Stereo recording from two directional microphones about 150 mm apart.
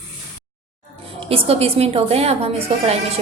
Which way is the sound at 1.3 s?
40° right (ahead or behind).